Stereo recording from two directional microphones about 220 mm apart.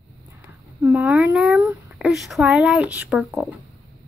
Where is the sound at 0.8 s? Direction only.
5° right (ahead or behind).